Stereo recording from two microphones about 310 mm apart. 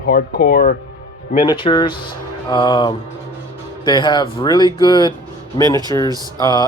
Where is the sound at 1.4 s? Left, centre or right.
Centre.